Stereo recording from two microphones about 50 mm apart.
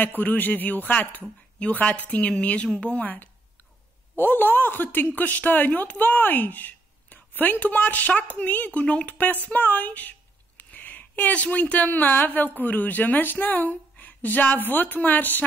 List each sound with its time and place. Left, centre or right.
0.2 s speech: left
4.2 s speech: left
9.2 s a woman's voice: left